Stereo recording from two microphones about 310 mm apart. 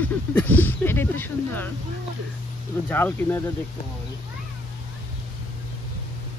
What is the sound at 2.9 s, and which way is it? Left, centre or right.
Speech, centre.